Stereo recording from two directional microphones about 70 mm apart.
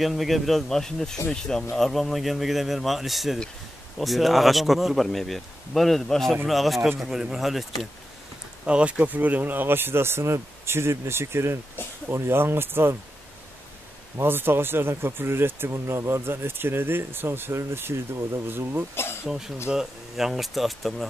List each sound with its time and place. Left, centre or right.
0.0 s speech: centre
8.6 s speech: centre; by 12.9 s right
14.1 s speech: right
19.2 s speech: centre